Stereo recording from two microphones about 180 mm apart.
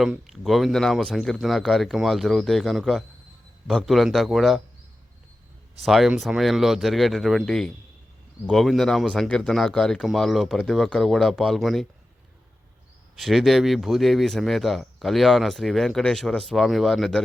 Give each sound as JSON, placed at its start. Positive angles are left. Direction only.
{"t": 0.0, "sound": "speech", "side_deg": 0}
{"t": 5.8, "sound": "speech", "side_deg": 0}
{"t": 13.1, "sound": "speech", "side_deg": 0}